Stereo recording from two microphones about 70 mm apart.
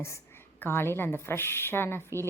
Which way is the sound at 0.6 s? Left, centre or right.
Left.